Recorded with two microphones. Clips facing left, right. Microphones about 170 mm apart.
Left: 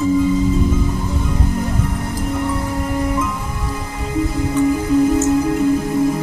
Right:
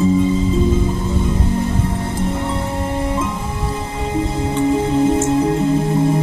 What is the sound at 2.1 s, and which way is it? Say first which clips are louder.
Music: even; 25° right (ahead or behind).